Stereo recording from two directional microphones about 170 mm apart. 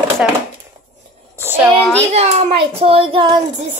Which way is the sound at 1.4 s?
15° right (ahead or behind).